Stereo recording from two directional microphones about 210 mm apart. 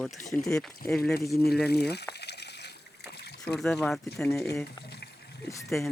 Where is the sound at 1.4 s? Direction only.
50° left (ahead or behind).